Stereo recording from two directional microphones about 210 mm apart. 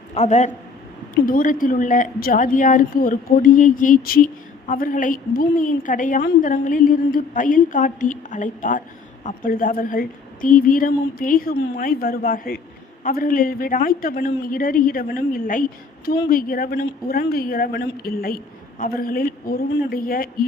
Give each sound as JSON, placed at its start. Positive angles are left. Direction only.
{"t": 0.1, "sound": "a man's voice", "side_deg": 30}